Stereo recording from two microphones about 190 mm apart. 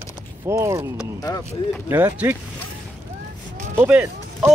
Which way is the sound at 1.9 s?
10° right (ahead or behind).